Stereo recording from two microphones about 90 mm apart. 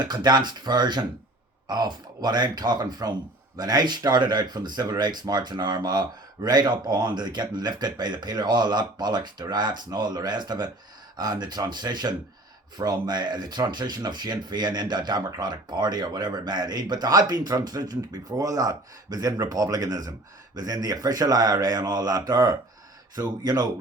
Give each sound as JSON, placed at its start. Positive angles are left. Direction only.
{"t": 0.0, "sound": "speech", "side_deg": -50}